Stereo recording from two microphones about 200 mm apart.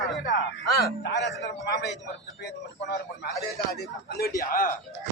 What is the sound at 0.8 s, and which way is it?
Speech, 60° left (ahead or behind).